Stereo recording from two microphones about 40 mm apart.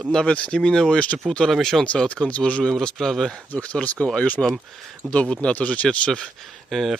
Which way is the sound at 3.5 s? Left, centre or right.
Left.